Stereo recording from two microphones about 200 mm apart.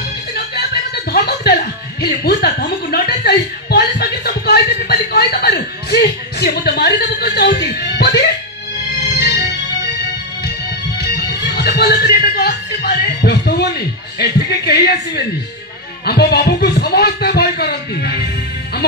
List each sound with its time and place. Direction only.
1.1 s a woman's voice: 55° left (ahead or behind)
9.2 s music: 55° left (ahead or behind)
11.0 s speech: 55° left (ahead or behind)